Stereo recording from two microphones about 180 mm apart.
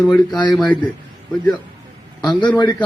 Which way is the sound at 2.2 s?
25° left (ahead or behind).